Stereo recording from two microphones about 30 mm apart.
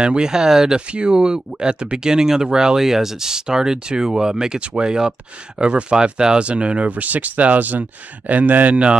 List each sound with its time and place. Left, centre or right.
0.0 s speech: right
0.7 s speech: right
2.8 s speech: centre
4.6 s speech: right
6.9 s speech: right